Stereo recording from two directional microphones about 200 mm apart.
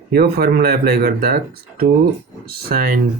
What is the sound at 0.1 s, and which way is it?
Speech, 50° right (ahead or behind).